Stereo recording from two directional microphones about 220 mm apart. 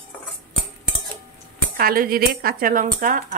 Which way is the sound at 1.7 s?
40° right (ahead or behind).